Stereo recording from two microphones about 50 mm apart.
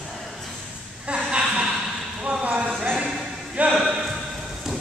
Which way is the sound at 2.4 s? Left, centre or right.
Right.